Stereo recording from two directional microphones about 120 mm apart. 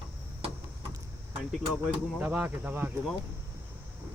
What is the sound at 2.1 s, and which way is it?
Speech, 15° right (ahead or behind).